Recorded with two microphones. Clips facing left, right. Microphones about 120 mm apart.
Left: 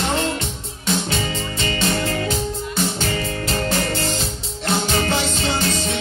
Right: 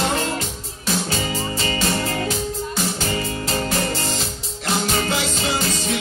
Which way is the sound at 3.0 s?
25° right (ahead or behind).